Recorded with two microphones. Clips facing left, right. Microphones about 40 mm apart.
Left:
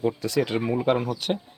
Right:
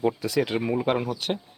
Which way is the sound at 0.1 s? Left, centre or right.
Centre.